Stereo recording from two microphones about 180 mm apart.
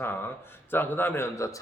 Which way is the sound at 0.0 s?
10° left (ahead or behind).